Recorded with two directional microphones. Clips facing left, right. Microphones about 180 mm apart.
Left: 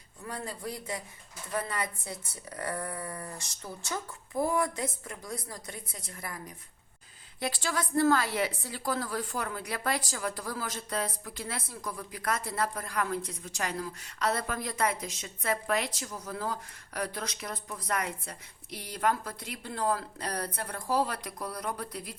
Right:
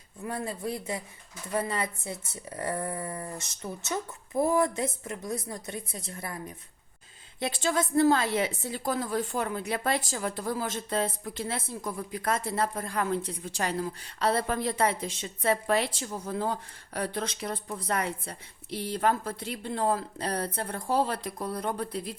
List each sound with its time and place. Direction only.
0.3 s a woman's voice: 25° right (ahead or behind)